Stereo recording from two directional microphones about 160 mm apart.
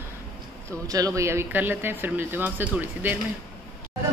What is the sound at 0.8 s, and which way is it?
Speech, 20° right (ahead or behind).